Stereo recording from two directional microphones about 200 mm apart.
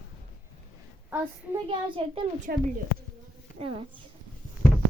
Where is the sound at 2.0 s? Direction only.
25° right (ahead or behind).